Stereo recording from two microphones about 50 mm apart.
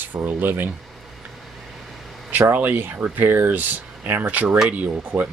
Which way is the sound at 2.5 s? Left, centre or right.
Right.